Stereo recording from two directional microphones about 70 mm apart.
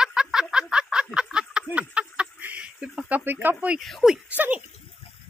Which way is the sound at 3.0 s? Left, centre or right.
Right.